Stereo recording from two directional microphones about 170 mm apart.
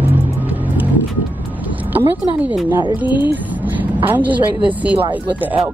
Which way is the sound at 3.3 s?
10° right (ahead or behind).